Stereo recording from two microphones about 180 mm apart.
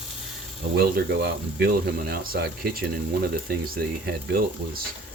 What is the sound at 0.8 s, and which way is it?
Speech, 60° right (ahead or behind).